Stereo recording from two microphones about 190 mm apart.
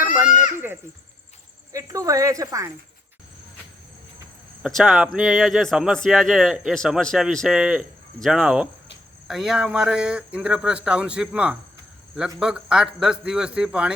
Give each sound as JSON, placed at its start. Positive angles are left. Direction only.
{"t": 0.0, "sound": "goat", "side_deg": -5}
{"t": 1.7, "sound": "speech", "side_deg": -15}
{"t": 4.6, "sound": "a man's voice", "side_deg": 0}